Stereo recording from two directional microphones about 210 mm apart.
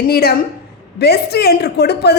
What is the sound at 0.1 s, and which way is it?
A woman's voice, 45° left (ahead or behind).